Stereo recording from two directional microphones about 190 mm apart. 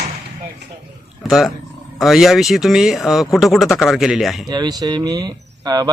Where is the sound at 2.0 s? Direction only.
Centre (ahead or behind).